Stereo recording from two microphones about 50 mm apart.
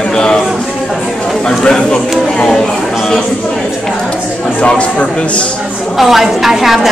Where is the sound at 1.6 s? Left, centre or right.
Centre.